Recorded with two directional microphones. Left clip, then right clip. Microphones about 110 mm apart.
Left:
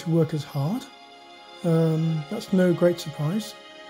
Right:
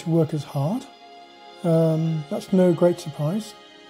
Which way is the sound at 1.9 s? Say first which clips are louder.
Right 3 dB; 15° right (ahead or behind).